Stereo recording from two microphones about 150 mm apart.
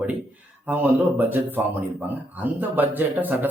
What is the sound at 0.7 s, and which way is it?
A man's voice, 10° right (ahead or behind).